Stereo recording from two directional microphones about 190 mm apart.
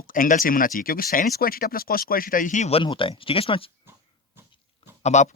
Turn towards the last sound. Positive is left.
turn(degrees=40)  # may be behind; listen again after turning